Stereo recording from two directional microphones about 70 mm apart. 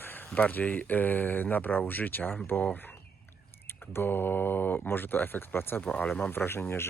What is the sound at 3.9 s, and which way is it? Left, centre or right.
Speech, left.